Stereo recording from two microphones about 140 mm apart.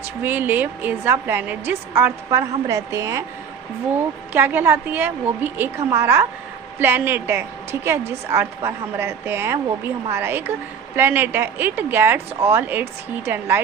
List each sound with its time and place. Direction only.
0.2 s a woman's voice: 15° right (ahead or behind)
4.3 s a woman's voice: 15° right (ahead or behind)